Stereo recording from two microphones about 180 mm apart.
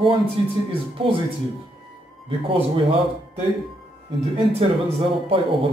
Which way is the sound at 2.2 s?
30° right (ahead or behind).